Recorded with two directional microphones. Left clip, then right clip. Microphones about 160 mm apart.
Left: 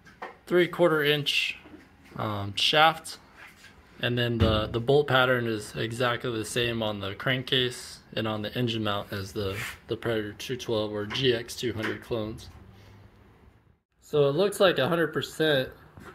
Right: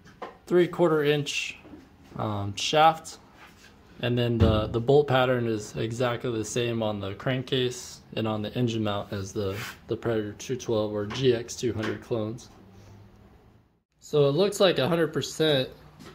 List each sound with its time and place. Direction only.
0.5 s speech: 10° right (ahead or behind)
14.1 s speech: 10° right (ahead or behind)